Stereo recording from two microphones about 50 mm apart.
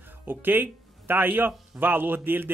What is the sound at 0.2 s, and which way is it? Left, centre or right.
A man's voice, right.